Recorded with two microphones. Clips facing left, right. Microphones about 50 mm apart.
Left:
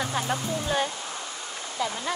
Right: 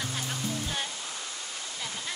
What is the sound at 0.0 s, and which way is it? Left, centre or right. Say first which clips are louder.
Speech: left 6 dB; left.